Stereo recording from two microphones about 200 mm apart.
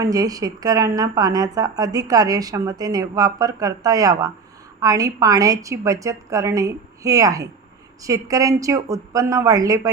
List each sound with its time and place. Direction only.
0.0 s a woman's voice: 20° right (ahead or behind)